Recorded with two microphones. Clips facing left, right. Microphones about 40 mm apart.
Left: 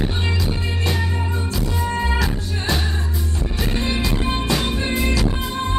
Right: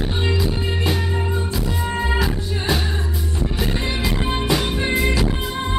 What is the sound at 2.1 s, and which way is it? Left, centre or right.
Music, centre.